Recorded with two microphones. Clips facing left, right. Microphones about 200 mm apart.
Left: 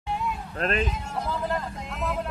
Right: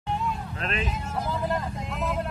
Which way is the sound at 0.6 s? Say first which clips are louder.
Left 8 dB; 40° left (ahead or behind).